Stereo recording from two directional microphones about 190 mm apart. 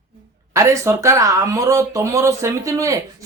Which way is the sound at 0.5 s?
15° right (ahead or behind).